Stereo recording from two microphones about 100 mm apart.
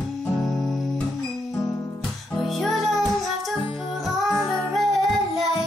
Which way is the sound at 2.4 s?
Centre (ahead or behind).